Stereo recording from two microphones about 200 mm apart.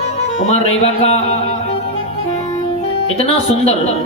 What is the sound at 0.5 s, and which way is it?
Speech, 30° left (ahead or behind).